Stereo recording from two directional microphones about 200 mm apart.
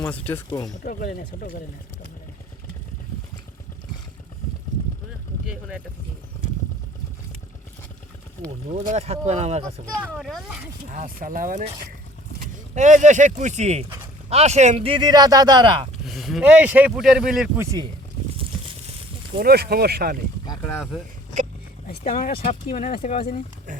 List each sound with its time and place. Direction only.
0.0 s speech: 10° left (ahead or behind)
0.9 s speech: 45° left (ahead or behind)
5.5 s speech: 5° right (ahead or behind)
8.9 s speech: 30° right (ahead or behind)
10.1 s speech: centre (ahead or behind)
10.9 s speech: 45° right (ahead or behind); by 15.9 s 25° right (ahead or behind)
16.0 s speech: centre (ahead or behind)
17.6 s speech: 15° right (ahead or behind)
19.4 s speech: 50° right (ahead or behind)
21.8 s speech: 45° left (ahead or behind)
22.4 s speech: 35° left (ahead or behind)